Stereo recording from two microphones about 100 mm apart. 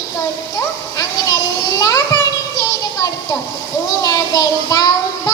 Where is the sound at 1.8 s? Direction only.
40° left (ahead or behind).